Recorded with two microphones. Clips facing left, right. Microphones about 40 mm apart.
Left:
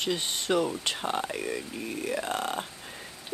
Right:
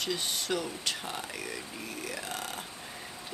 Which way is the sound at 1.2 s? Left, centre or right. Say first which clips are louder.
Left 6 dB; centre.